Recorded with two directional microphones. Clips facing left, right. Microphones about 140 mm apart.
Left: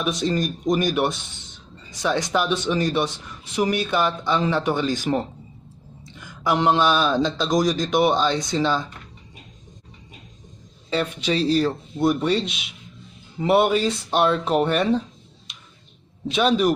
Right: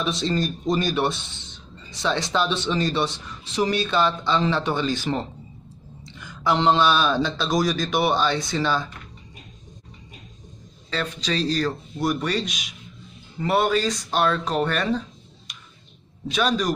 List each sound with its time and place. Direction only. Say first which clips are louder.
0.2 s speech: left 1 dB; 15° left (ahead or behind)
11.3 s speech: left 4 dB; 10° left (ahead or behind)
12.0 s speech: left 4 dB; 25° left (ahead or behind)
16.3 s speech: left 3 dB; 25° left (ahead or behind)